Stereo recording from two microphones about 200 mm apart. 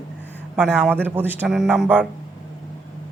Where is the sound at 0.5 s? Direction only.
5° right (ahead or behind).